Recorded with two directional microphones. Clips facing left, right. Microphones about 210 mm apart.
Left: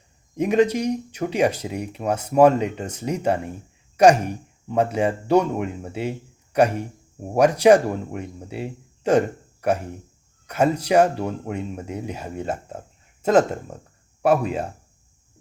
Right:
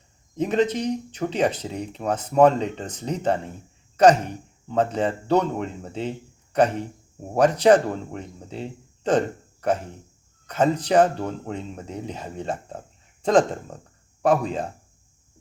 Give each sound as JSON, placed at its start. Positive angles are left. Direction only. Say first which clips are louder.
{"t": 0.3, "sound": "speech", "louder": "left 3 dB", "side_deg": 10}